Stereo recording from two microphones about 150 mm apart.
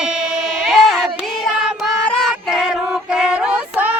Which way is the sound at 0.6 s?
Centre (ahead or behind).